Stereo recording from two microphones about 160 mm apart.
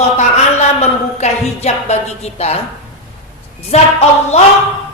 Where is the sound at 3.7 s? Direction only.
45° left (ahead or behind).